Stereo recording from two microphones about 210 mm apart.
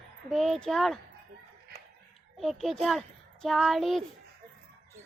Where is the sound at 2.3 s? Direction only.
Centre (ahead or behind).